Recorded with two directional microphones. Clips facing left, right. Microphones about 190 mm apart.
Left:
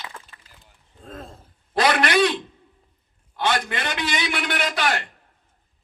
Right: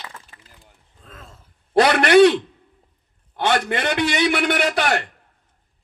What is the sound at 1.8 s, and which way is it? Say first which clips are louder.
A man's voice: right 7 dB; 60° right (ahead or behind).